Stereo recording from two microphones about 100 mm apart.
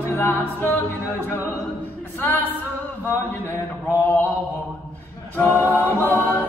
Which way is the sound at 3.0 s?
25° left (ahead or behind).